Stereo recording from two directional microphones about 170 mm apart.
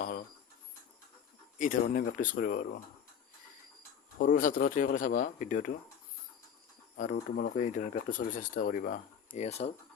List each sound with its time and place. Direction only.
1.5 s speech: 50° left (ahead or behind)
4.2 s speech: 50° left (ahead or behind)
6.9 s speech: 50° left (ahead or behind)
9.5 s speech: 35° left (ahead or behind)